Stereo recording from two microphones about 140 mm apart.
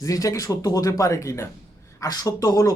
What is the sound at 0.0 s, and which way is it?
Speech, 25° left (ahead or behind).